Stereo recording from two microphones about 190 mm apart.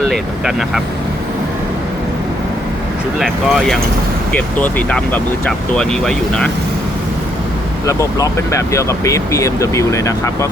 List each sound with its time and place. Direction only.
0.1 s speech: centre (ahead or behind)
3.2 s speech: centre (ahead or behind)
7.9 s speech: 15° left (ahead or behind)